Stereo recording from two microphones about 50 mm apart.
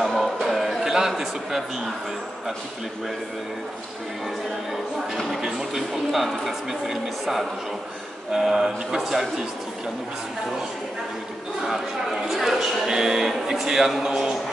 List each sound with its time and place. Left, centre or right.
0.0 s a sound: centre
5.1 s speech: centre
11.6 s a man's voice: centre